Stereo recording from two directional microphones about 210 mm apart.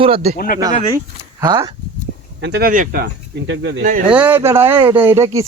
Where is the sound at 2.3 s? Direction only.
55° right (ahead or behind).